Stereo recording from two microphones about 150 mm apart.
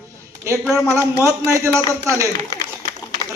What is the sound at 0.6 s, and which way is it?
Speech, 5° left (ahead or behind).